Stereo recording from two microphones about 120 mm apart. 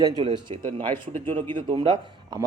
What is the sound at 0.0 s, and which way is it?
A man's voice, 40° right (ahead or behind).